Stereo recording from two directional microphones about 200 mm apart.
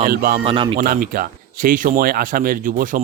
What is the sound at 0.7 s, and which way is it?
Speech, 45° right (ahead or behind).